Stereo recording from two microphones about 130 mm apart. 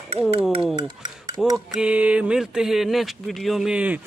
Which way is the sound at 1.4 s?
Centre (ahead or behind).